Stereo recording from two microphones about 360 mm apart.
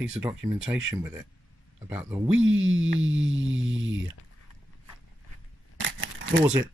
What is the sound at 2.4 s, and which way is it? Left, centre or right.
Speech, right.